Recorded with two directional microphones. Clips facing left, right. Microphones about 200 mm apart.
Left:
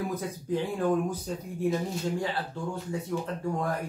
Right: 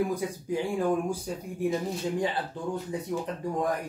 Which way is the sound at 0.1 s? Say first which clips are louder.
Right 1 dB; 10° right (ahead or behind).